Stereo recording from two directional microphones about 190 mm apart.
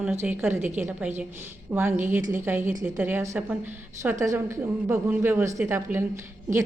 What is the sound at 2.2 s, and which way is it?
Speech, 45° right (ahead or behind).